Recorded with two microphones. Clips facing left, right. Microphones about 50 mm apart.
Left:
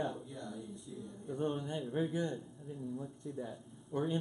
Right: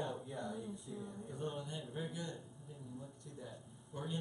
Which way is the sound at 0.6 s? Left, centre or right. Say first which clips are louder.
Even; centre.